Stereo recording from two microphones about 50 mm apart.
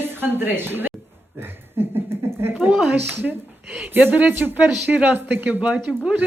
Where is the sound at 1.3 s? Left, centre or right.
Right.